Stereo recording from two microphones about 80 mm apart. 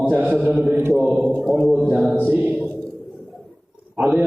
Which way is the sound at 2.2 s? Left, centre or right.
Centre.